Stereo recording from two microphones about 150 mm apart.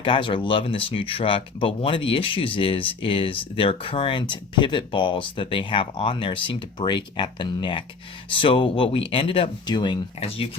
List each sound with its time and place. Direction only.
0.0 s speech: 35° left (ahead or behind)
10.2 s speech: 40° left (ahead or behind)